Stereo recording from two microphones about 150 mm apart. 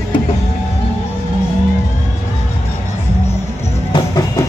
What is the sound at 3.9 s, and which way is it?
Music, 25° left (ahead or behind).